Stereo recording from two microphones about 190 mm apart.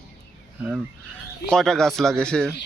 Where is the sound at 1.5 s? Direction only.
Centre (ahead or behind).